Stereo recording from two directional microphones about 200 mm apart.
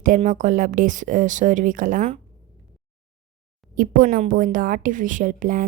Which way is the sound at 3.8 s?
45° right (ahead or behind).